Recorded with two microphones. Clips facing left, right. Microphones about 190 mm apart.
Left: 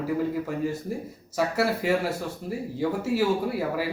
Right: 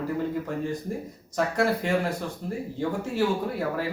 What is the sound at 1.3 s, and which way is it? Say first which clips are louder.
Speech: even; 5° left (ahead or behind).